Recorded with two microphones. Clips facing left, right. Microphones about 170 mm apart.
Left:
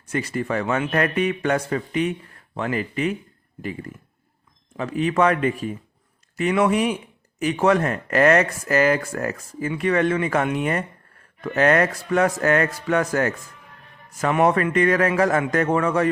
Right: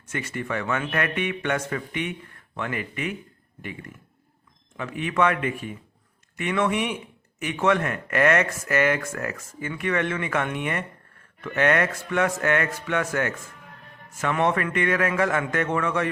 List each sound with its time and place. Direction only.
0.1 s speech: 35° left (ahead or behind)
4.8 s speech: 35° left (ahead or behind)